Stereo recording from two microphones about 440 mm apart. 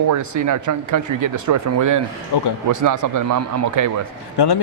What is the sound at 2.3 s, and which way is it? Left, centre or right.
Speech, left.